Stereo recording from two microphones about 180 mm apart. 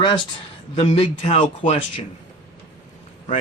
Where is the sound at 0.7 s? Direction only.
35° left (ahead or behind).